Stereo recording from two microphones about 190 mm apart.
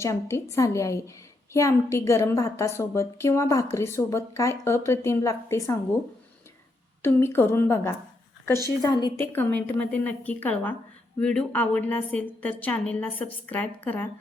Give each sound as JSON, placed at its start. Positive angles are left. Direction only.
{"t": 0.0, "sound": "a woman's voice", "side_deg": 15}
{"t": 7.0, "sound": "a woman's voice", "side_deg": 10}
{"t": 8.8, "sound": "a woman's voice", "side_deg": 25}
{"t": 9.3, "sound": "a woman's voice", "side_deg": 10}